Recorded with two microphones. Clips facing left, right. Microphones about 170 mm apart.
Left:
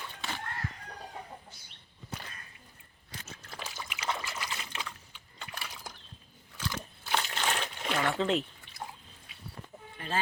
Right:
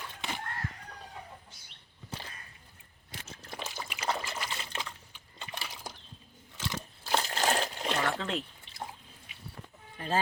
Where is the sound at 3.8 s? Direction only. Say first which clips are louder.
Right 2 dB; 35° right (ahead or behind).